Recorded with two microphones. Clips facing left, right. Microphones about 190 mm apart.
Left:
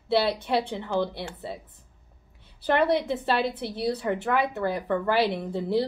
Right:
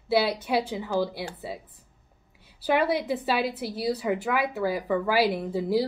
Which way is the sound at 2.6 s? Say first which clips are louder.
Left 1 dB; 5° right (ahead or behind).